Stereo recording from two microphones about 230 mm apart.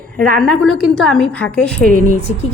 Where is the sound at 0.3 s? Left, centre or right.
Centre.